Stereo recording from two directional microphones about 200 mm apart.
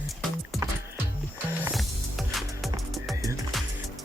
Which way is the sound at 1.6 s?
Centre (ahead or behind).